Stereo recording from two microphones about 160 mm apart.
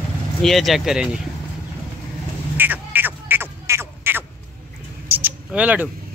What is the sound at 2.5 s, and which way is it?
Quack, 10° right (ahead or behind).